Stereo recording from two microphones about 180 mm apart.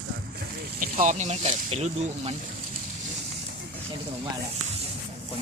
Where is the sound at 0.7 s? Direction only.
50° right (ahead or behind).